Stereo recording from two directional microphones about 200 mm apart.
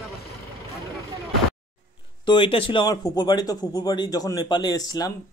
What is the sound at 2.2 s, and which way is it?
A man's voice, 25° left (ahead or behind).